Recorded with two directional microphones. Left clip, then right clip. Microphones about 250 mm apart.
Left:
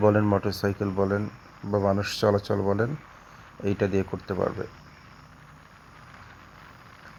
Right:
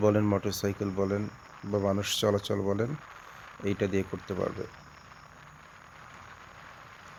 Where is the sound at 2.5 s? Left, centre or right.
Centre.